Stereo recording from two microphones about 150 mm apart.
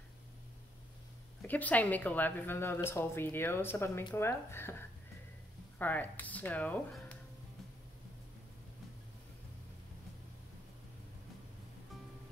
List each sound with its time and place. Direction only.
1.5 s a woman's voice: 10° left (ahead or behind)